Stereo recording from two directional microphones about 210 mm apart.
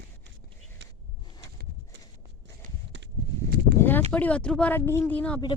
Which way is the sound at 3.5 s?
50° right (ahead or behind).